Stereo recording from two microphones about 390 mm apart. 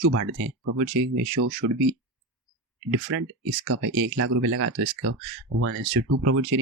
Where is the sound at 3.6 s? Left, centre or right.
Right.